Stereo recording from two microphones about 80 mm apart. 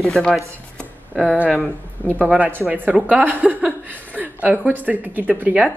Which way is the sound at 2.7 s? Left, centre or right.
Centre.